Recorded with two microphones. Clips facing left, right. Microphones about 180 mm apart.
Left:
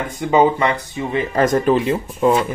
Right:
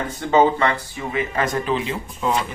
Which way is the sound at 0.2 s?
15° left (ahead or behind).